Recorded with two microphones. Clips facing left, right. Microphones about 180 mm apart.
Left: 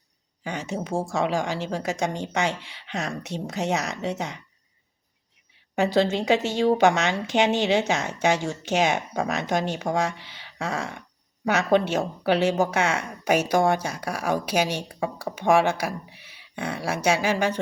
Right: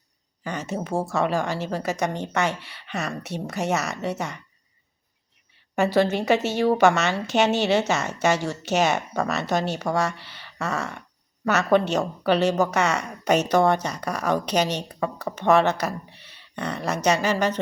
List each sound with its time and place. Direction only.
0.4 s speech: 15° left (ahead or behind)
5.7 s speech: 15° left (ahead or behind)